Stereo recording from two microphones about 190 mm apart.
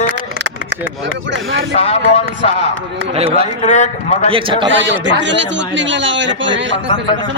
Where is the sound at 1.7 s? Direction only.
35° left (ahead or behind).